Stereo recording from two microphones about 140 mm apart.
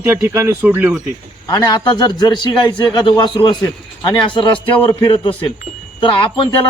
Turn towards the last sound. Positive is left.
turn(degrees=35)  # may be behind; listen again after turning